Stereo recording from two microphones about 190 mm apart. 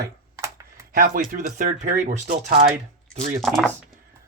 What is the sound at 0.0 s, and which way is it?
Computer keyboard, 15° right (ahead or behind).